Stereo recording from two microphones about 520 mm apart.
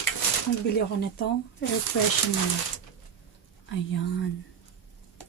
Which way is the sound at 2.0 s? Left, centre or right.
Left.